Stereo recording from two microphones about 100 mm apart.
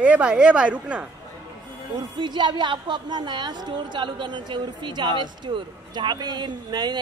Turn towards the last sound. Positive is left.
turn(degrees=-45)  # may be behind; listen again after turning